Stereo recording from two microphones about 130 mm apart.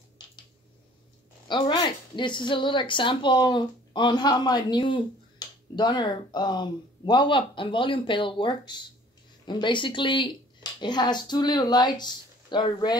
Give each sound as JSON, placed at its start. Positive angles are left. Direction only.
{"t": 1.5, "sound": "a woman's voice", "side_deg": 35}